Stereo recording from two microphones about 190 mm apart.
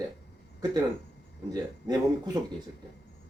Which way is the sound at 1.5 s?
20° right (ahead or behind).